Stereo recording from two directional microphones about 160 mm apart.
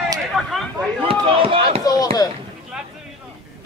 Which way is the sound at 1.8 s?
25° left (ahead or behind).